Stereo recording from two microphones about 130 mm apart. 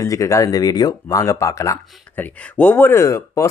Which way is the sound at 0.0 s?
25° left (ahead or behind).